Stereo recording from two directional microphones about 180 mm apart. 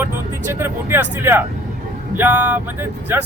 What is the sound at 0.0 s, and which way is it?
Speech, 10° right (ahead or behind).